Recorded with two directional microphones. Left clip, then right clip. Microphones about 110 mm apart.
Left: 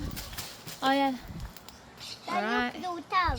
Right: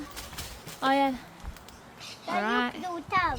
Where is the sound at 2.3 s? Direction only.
25° right (ahead or behind).